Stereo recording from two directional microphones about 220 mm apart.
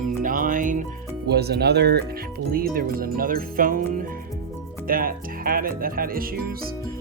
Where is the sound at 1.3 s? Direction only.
45° right (ahead or behind).